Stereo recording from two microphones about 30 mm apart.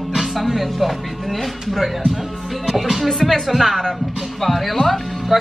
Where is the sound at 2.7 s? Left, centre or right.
Centre.